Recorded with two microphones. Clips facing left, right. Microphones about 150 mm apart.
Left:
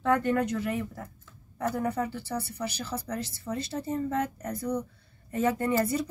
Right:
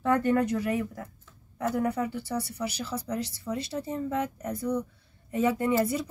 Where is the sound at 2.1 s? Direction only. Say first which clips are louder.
Right 2 dB; 5° right (ahead or behind).